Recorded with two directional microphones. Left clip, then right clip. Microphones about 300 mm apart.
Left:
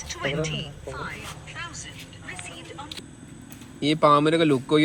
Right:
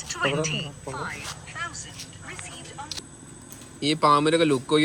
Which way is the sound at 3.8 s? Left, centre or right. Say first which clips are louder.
Left 1 dB; centre.